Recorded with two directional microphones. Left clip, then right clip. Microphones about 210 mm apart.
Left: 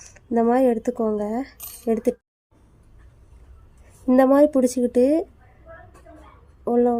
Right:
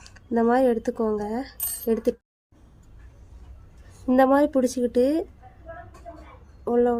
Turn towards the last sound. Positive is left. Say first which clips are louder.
# left 2 dB
turn(degrees=20)  # may be behind; listen again after turning